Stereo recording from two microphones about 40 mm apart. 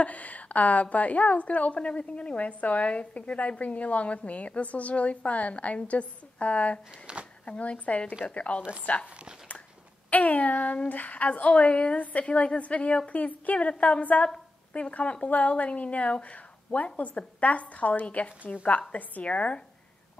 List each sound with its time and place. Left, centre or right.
0.0 s a woman's voice: left
7.1 s speech: right
7.4 s a woman's voice: left
10.0 s a woman's voice: left
13.1 s a woman's voice: left